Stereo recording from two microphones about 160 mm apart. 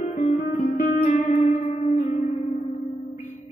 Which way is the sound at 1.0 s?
55° left (ahead or behind).